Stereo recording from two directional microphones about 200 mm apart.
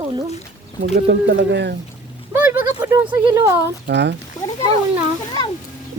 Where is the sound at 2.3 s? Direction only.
10° right (ahead or behind).